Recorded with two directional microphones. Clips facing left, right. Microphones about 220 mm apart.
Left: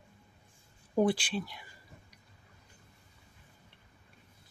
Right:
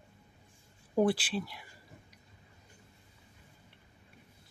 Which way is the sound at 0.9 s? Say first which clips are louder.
Even; 5° right (ahead or behind).